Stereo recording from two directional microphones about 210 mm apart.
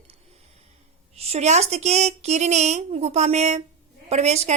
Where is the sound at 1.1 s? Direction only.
30° right (ahead or behind).